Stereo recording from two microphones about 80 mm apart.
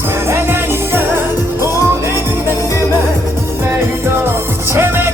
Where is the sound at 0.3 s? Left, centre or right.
Right.